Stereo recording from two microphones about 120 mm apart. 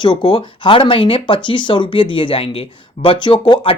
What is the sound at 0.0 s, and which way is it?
Speech, 40° left (ahead or behind).